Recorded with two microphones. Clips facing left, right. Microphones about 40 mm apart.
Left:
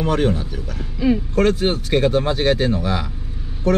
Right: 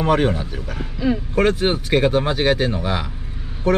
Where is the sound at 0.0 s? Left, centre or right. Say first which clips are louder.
Right 1 dB; centre.